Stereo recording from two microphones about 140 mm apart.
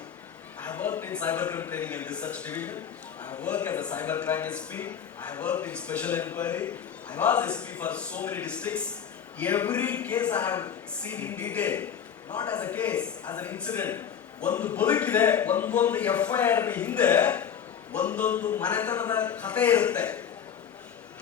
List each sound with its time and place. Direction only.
0.6 s a man's voice: 10° left (ahead or behind)